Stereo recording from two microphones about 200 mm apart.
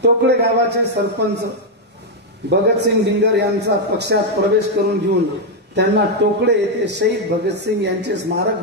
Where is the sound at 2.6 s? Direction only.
55° right (ahead or behind).